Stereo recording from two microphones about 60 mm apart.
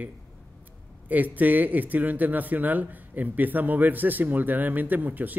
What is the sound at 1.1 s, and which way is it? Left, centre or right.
Speech, right.